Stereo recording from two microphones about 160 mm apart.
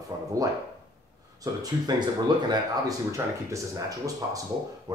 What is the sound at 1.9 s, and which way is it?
Speech, 25° right (ahead or behind).